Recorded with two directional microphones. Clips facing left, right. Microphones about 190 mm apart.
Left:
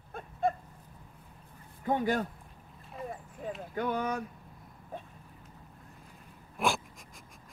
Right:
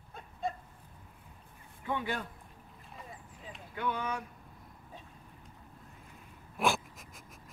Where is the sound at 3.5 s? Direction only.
55° left (ahead or behind).